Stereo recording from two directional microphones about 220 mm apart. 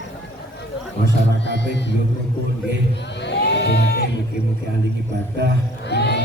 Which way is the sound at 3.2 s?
50° left (ahead or behind).